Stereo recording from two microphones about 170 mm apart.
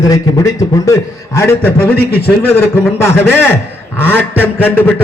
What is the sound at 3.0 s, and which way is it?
A man's voice, 15° left (ahead or behind).